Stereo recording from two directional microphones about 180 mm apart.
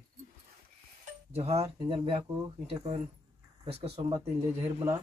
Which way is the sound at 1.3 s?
35° right (ahead or behind).